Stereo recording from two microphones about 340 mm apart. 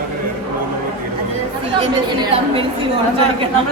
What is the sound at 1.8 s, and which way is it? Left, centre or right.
Speech, centre.